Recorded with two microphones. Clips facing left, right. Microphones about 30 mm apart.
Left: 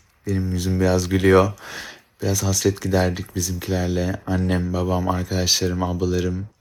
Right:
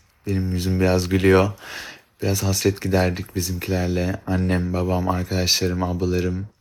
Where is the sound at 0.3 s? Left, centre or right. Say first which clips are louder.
Even; right.